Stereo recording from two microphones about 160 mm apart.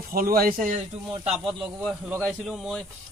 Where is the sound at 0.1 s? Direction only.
65° right (ahead or behind).